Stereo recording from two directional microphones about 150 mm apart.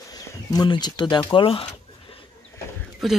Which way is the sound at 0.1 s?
25° left (ahead or behind).